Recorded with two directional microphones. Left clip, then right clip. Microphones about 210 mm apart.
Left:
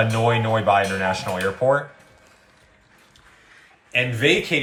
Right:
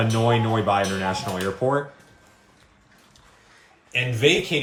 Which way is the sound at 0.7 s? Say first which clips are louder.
Left 4 dB; centre (ahead or behind).